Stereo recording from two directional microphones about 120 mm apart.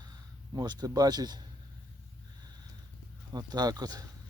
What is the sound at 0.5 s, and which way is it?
Speech, 35° right (ahead or behind).